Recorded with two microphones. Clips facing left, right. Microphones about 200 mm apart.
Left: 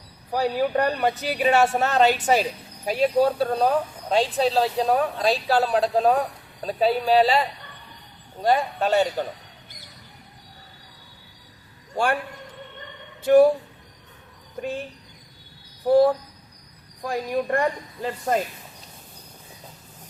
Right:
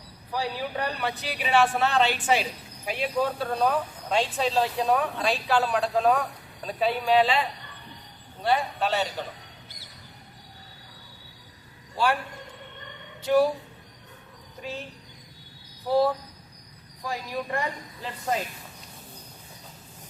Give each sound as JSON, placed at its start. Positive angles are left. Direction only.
{"t": 0.3, "sound": "speech", "side_deg": 45}
{"t": 13.2, "sound": "speech", "side_deg": 55}
{"t": 15.9, "sound": "speech", "side_deg": 50}